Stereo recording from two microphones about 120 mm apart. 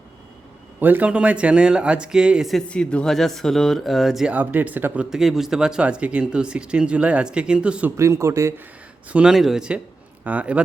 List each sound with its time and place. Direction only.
0.8 s speech: 15° right (ahead or behind)
5.1 s speech: centre (ahead or behind)
7.9 s a man's voice: 25° right (ahead or behind)
9.0 s speech: 10° right (ahead or behind)